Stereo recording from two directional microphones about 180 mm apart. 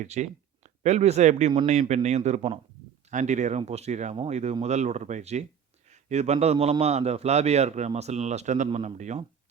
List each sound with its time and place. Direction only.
0.0 s a man's voice: 40° right (ahead or behind)